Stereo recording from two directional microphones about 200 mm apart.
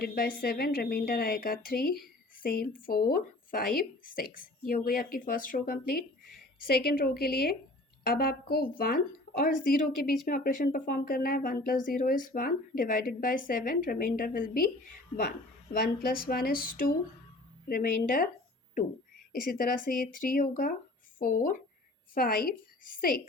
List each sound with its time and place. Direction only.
0.0 s a woman's voice: 50° left (ahead or behind)